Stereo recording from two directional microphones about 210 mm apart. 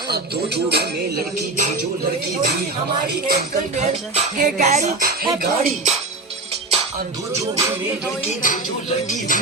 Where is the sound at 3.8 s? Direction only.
40° right (ahead or behind).